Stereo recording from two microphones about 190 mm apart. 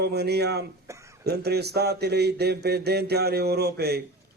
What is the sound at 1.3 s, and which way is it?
A man's voice, 60° right (ahead or behind).